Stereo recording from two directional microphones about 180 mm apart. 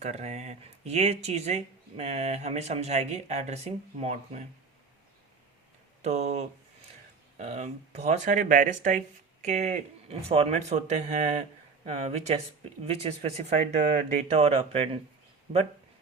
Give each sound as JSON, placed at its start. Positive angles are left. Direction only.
{"t": 0.0, "sound": "speech", "side_deg": -40}
{"t": 6.0, "sound": "speech", "side_deg": -40}